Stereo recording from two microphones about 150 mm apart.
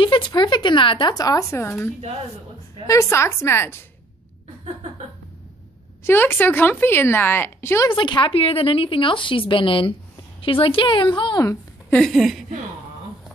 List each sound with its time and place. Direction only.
0.0 s speech: 30° left (ahead or behind)
2.9 s speech: 20° left (ahead or behind)
6.0 s speech: 15° left (ahead or behind)
7.9 s a woman's voice: 35° left (ahead or behind)
11.9 s speech: centre (ahead or behind)